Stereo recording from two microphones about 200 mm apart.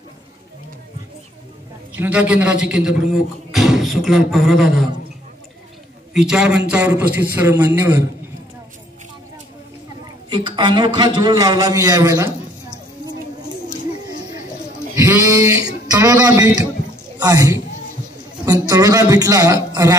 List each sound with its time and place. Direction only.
2.0 s a man's voice: 5° right (ahead or behind)
6.1 s a man's voice: 5° right (ahead or behind)
10.3 s a man's voice: 25° right (ahead or behind)
15.0 s goat: 15° right (ahead or behind)
15.9 s a man's voice: 20° right (ahead or behind)